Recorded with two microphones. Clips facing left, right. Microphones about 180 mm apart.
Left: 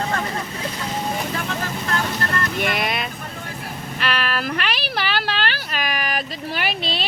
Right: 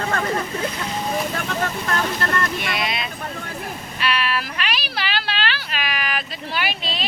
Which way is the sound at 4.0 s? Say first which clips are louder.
Right 1 dB; 50° left (ahead or behind).